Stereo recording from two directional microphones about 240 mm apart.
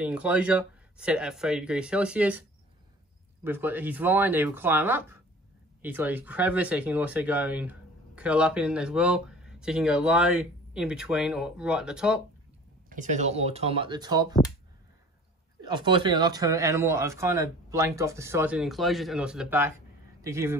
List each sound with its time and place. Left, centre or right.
0.0 s speech: centre
3.4 s speech: centre
12.9 s speech: right
15.6 s speech: centre